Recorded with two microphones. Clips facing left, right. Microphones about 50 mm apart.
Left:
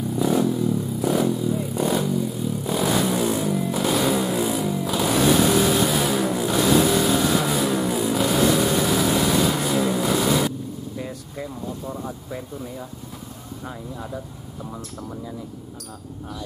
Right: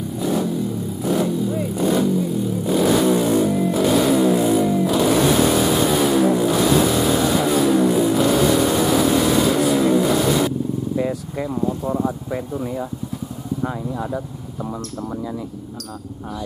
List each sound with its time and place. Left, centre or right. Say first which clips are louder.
0.1 s vehicle: left 1 dB; centre
11.0 s speech: right 9 dB; right